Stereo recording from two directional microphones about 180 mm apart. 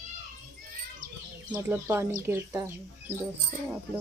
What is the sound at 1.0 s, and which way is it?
Bird, 50° right (ahead or behind).